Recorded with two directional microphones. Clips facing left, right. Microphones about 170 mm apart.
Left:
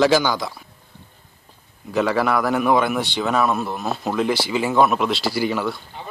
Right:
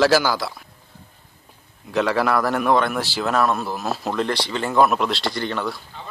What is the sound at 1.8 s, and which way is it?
A man's voice, centre (ahead or behind).